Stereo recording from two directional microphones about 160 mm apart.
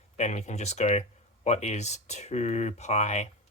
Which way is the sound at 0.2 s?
45° left (ahead or behind).